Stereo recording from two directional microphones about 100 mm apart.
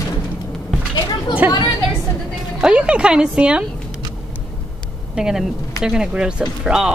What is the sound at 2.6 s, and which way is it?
Speech, 10° right (ahead or behind).